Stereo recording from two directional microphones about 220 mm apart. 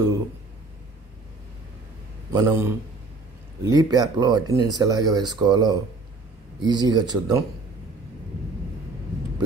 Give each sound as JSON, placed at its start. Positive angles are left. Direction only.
{"t": 2.3, "sound": "a man's voice", "side_deg": -15}